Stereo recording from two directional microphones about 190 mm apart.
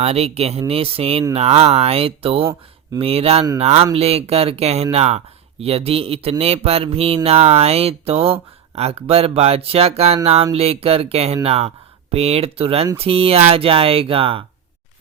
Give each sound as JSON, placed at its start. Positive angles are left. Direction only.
{"t": 0.0, "sound": "speech", "side_deg": -35}